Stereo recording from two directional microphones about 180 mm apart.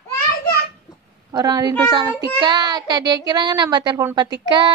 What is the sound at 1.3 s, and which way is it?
A woman's voice, 20° right (ahead or behind).